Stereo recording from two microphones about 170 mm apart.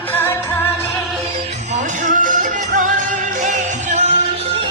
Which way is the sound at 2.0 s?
50° right (ahead or behind).